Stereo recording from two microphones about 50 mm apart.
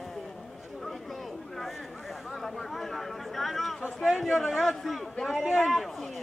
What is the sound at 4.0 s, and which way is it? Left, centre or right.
A man's voice, centre.